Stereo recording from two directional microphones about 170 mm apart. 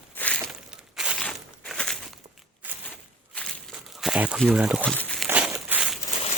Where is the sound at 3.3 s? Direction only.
Centre (ahead or behind).